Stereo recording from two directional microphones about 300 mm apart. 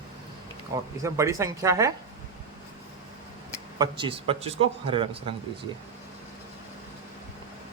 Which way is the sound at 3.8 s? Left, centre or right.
Centre.